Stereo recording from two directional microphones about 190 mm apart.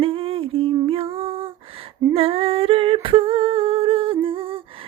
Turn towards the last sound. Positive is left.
turn(degrees=-30)  # may be behind; listen again after turning